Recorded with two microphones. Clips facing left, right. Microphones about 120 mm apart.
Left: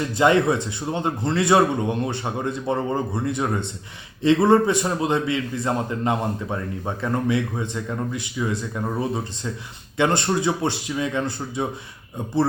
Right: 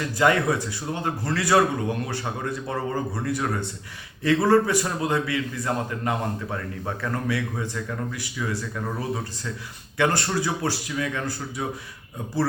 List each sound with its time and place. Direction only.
0.2 s a man's voice: 25° left (ahead or behind)